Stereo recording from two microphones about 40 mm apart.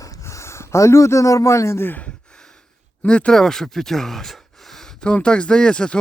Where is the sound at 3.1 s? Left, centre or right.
Left.